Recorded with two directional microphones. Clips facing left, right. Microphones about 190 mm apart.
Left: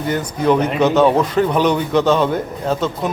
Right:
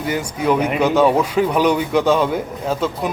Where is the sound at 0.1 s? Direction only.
10° right (ahead or behind).